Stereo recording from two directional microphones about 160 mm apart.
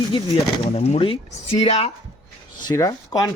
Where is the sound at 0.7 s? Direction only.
40° left (ahead or behind).